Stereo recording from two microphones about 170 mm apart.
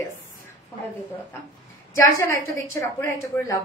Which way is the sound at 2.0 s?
15° left (ahead or behind).